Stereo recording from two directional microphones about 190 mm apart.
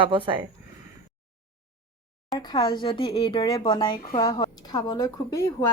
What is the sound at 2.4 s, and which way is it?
Speech, 25° left (ahead or behind).